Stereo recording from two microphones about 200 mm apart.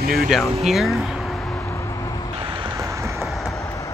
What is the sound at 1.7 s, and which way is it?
Vehicle, 15° left (ahead or behind).